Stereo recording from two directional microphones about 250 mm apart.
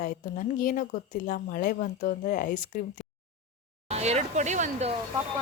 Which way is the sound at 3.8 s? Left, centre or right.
Right.